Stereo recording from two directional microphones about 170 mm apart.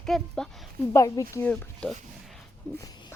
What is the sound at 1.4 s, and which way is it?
Speech, 5° left (ahead or behind).